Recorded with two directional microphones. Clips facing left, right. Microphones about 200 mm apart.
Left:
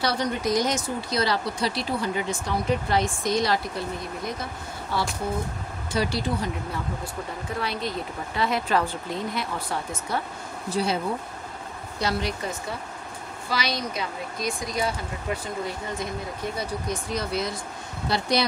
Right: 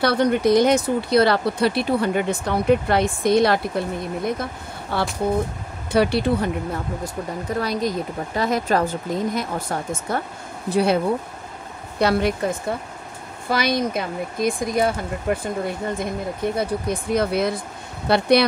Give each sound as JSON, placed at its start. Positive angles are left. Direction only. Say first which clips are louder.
{"t": 0.0, "sound": "speech", "louder": "right 8 dB", "side_deg": -60}
{"t": 7.6, "sound": "speech", "louder": "right 5 dB", "side_deg": -40}
{"t": 10.7, "sound": "speech", "louder": "right 7 dB", "side_deg": -60}
{"t": 12.0, "sound": "speech", "louder": "right 8 dB", "side_deg": -55}